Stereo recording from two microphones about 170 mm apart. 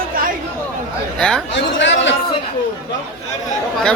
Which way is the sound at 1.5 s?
90° left.